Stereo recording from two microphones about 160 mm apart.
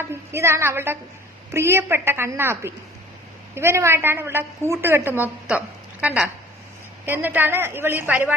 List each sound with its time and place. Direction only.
0.0 s a woman's voice: 15° right (ahead or behind)